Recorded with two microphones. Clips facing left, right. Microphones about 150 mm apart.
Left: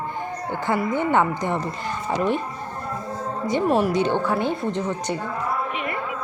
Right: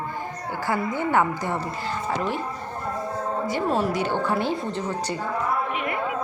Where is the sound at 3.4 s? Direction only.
15° left (ahead or behind).